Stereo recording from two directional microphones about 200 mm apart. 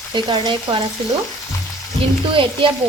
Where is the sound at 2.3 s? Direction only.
25° right (ahead or behind).